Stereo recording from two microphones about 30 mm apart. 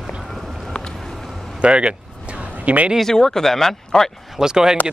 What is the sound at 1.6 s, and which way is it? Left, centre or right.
Speech, right.